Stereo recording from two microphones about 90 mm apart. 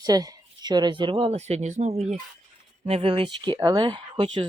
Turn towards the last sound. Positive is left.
turn(degrees=-60)  # may be behind; listen again after turning